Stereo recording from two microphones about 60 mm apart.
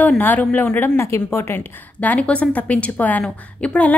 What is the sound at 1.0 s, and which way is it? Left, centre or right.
Speech, left.